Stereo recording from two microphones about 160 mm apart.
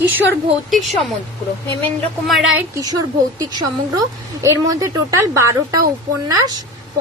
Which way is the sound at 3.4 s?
25° right (ahead or behind).